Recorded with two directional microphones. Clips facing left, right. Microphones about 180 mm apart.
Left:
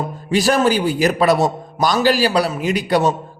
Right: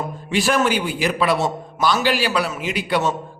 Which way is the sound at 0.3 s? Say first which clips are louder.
Left 4 dB; 40° left (ahead or behind).